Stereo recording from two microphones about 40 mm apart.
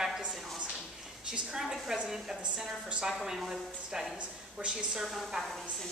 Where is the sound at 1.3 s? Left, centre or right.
Centre.